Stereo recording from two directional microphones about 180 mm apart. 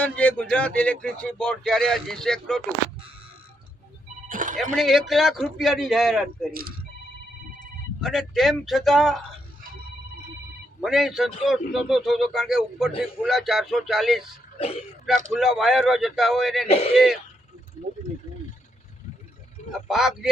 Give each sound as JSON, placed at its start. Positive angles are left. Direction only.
{"t": 0.0, "sound": "a man's voice", "side_deg": 5}
{"t": 4.3, "sound": "music", "side_deg": -45}
{"t": 4.7, "sound": "a man's voice", "side_deg": 0}
{"t": 6.5, "sound": "speech", "side_deg": -55}
{"t": 8.0, "sound": "a man's voice", "side_deg": 0}
{"t": 10.8, "sound": "a man's voice", "side_deg": 0}
{"t": 15.3, "sound": "a man's voice", "side_deg": 0}
{"t": 16.6, "sound": "speech", "side_deg": 35}
{"t": 19.7, "sound": "a man's voice", "side_deg": 0}